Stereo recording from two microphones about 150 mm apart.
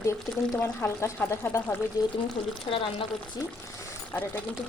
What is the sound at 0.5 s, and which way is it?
Speech, 15° left (ahead or behind).